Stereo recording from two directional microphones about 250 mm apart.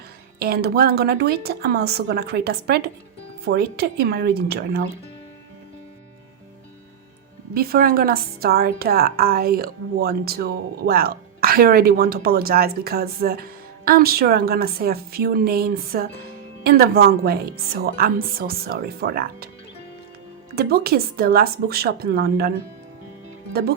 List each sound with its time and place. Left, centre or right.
0.3 s a woman's voice: right
7.5 s a woman's voice: right
20.6 s a woman's voice: right